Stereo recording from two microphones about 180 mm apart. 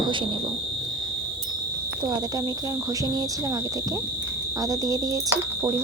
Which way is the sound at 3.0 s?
20° right (ahead or behind).